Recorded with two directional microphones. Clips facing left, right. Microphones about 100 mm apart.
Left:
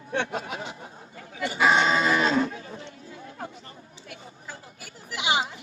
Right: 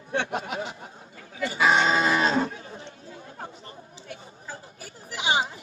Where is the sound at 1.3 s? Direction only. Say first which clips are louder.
Right 1 dB; 25° left (ahead or behind).